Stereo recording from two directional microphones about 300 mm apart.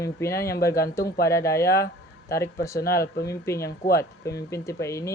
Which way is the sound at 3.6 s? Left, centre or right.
Left.